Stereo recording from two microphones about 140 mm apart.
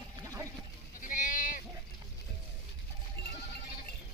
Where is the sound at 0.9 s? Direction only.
70° left (ahead or behind).